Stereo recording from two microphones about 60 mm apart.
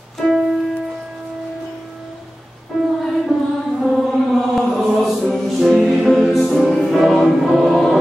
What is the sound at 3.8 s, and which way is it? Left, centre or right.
Chant, centre.